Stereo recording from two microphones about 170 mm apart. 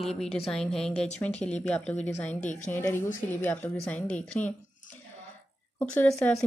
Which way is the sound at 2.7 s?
15° left (ahead or behind).